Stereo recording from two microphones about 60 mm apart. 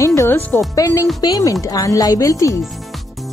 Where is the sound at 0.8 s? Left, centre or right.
Left.